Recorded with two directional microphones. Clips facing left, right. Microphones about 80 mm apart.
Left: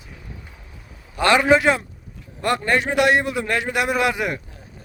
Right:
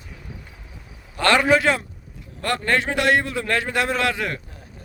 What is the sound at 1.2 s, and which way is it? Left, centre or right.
A man's voice, centre.